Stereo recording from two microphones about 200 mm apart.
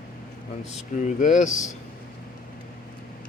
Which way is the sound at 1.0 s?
40° left (ahead or behind).